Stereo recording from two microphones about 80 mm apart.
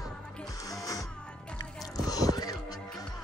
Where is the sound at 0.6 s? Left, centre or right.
Left.